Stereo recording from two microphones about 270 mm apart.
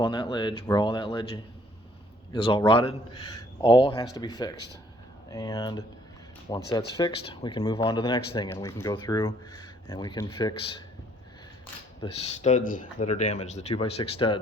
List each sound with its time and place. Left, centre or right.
0.0 s speech: centre
11.6 s speech: left